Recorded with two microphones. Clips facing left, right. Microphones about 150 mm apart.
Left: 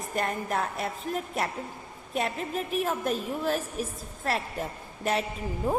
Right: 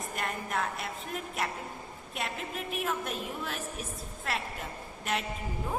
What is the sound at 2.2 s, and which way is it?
A woman's voice, 40° left (ahead or behind).